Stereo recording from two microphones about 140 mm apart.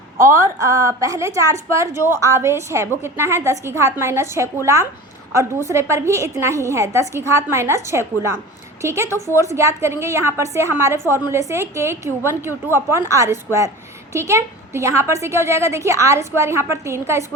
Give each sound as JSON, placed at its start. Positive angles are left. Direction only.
{"t": 0.2, "sound": "a woman's voice", "side_deg": -20}